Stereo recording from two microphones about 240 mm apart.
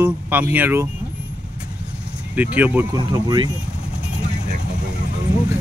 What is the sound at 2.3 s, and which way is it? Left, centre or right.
Speech, centre.